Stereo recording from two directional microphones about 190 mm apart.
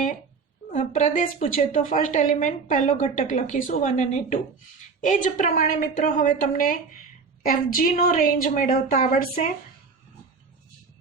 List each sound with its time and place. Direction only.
0.7 s a woman's voice: 40° left (ahead or behind)